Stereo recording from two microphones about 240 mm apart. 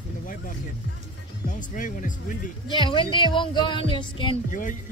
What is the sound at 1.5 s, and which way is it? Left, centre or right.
Speech, left.